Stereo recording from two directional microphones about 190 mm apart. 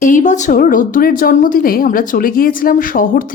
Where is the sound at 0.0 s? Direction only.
45° left (ahead or behind).